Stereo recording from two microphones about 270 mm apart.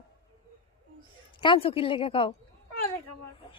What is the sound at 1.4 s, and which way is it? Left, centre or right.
Speech, centre.